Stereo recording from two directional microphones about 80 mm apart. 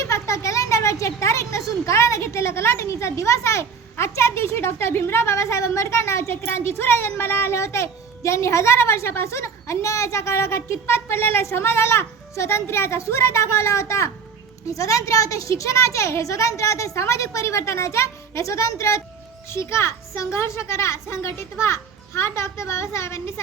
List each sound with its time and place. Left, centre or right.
0.0 s a child's voice: left